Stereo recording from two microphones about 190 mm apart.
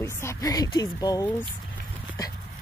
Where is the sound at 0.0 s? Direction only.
15° left (ahead or behind).